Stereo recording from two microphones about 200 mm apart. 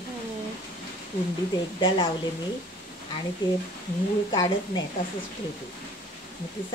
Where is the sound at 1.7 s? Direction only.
25° left (ahead or behind).